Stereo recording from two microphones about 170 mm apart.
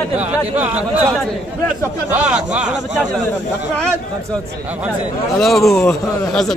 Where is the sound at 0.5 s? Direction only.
10° right (ahead or behind).